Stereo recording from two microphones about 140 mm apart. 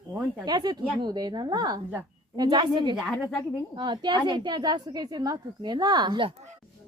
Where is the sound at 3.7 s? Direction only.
30° right (ahead or behind).